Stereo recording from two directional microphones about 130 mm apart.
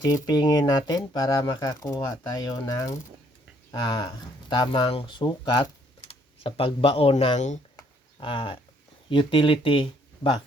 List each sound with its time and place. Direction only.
0.0 s speech: 30° left (ahead or behind)
6.0 s a sound: 50° left (ahead or behind)
7.3 s speech: 65° left (ahead or behind)
8.2 s speech: 40° left (ahead or behind)